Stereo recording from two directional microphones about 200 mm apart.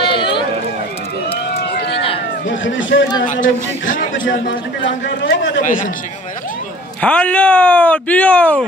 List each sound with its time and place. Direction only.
0.0 s run: 25° left (ahead or behind)
1.5 s run: 55° left (ahead or behind)
2.4 s a man's voice: 70° left (ahead or behind)
3.3 s a man's voice: 40° left (ahead or behind)
5.0 s a man's voice: 65° left (ahead or behind)
5.6 s a man's voice: 40° left (ahead or behind)
7.0 s speech: 5° left (ahead or behind)